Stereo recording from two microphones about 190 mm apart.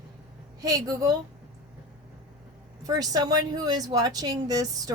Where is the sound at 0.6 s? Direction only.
20° right (ahead or behind).